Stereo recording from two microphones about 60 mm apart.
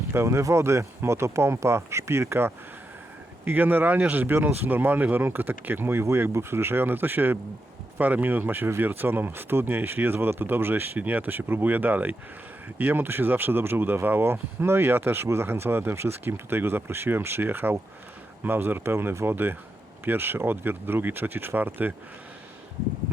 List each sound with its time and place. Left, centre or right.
0.1 s speech: right
3.4 s speech: right